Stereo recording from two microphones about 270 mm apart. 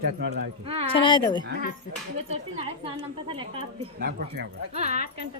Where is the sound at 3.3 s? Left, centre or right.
Centre.